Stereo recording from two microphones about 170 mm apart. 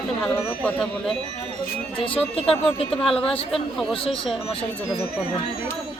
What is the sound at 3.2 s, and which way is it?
Speech, 35° left (ahead or behind).